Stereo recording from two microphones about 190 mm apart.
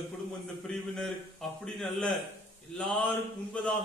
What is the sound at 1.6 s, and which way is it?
Speech, 5° left (ahead or behind).